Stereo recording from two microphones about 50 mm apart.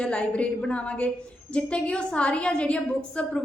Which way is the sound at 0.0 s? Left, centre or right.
Left.